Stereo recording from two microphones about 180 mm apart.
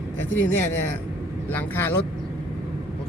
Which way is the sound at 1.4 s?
10° left (ahead or behind).